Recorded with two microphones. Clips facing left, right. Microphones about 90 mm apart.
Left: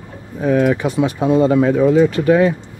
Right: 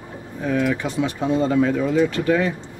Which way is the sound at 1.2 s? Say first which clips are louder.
Left 6 dB; 65° left (ahead or behind).